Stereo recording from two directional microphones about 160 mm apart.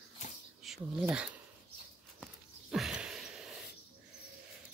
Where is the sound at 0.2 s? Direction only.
50° left (ahead or behind).